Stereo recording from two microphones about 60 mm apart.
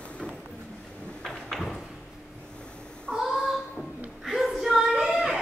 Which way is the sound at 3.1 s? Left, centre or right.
Centre.